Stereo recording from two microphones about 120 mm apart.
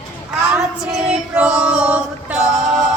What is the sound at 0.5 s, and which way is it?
Child singing, 5° right (ahead or behind).